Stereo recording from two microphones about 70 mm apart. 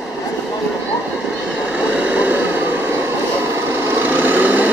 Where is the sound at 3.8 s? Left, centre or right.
Right.